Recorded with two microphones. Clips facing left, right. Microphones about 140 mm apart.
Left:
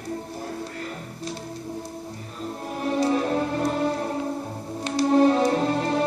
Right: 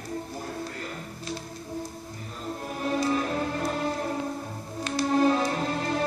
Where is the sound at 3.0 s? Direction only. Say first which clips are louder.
Left 6 dB; 30° left (ahead or behind).